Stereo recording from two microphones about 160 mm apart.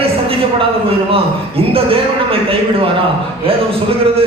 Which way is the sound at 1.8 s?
35° right (ahead or behind).